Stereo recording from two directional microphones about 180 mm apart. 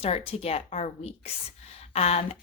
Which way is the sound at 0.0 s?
35° left (ahead or behind).